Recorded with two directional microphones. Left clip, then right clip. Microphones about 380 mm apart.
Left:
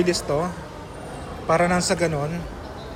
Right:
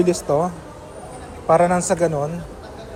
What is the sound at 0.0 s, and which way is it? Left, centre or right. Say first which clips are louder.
A man's voice: right 4 dB; centre.